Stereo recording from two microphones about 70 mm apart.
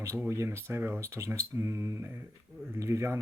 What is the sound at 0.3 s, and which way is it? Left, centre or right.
Speech, right.